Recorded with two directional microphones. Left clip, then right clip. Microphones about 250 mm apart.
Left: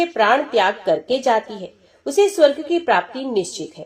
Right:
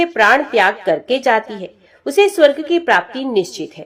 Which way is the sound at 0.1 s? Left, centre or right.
Right.